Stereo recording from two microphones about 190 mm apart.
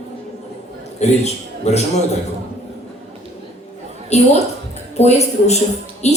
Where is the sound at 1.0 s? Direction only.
35° left (ahead or behind).